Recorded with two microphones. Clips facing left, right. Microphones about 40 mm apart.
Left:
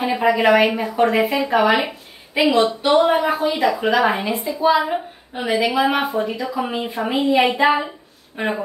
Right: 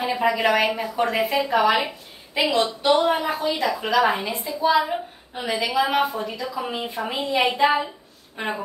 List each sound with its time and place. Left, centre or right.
0.0 s a woman's voice: centre